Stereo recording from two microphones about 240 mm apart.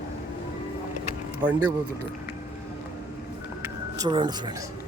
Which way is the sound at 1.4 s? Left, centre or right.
Centre.